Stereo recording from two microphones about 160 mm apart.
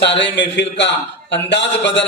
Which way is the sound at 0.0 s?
90° left.